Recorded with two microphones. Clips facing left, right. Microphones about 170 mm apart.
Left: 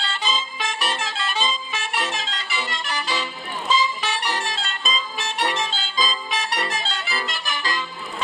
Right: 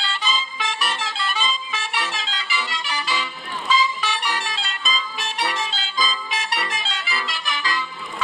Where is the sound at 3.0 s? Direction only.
40° left (ahead or behind).